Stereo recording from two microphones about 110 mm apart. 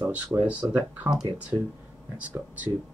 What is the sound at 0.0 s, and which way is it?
Speech, 15° right (ahead or behind).